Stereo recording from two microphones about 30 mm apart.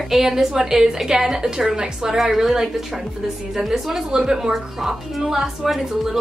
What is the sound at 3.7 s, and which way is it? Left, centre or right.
A woman's voice, centre.